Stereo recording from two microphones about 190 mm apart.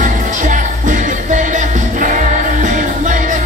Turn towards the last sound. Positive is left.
turn(degrees=-40)  # may be behind; listen again after turning